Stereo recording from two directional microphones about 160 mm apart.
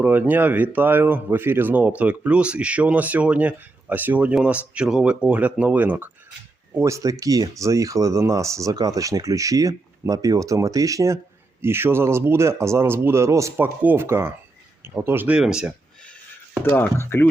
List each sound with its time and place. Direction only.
0.0 s speech: 10° right (ahead or behind)
16.6 s speech: 15° left (ahead or behind)